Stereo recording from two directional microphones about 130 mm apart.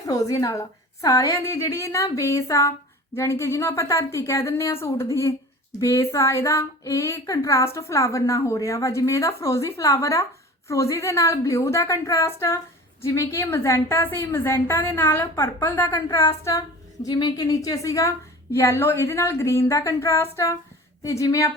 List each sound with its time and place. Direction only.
0.0 s speech: 25° left (ahead or behind)